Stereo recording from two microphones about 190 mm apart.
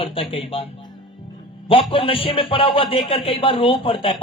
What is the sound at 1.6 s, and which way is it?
Speech, 30° left (ahead or behind).